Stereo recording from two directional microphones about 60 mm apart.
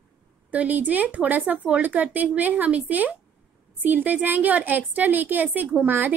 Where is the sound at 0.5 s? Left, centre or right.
Right.